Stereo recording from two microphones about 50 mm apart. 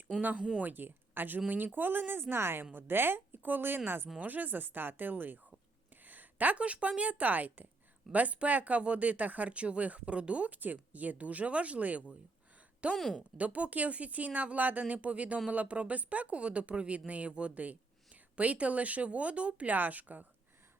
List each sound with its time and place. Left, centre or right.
0.3 s speech: centre
0.6 s a woman's voice: right
13.0 s a woman's voice: centre
13.3 s speech: right